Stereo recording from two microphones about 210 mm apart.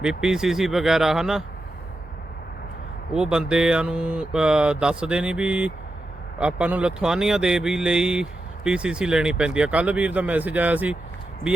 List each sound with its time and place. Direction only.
0.0 s speech: 5° right (ahead or behind)
3.1 s speech: 5° right (ahead or behind)